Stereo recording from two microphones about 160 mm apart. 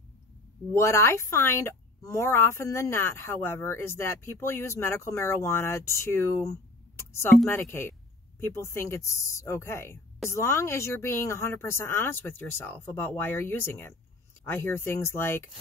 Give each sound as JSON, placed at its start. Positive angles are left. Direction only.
{"t": 0.7, "sound": "speech", "side_deg": 15}